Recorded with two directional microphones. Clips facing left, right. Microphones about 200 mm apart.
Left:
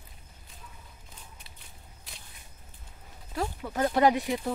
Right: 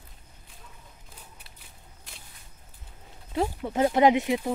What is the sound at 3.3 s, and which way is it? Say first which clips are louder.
Speech: right 5 dB; 25° right (ahead or behind).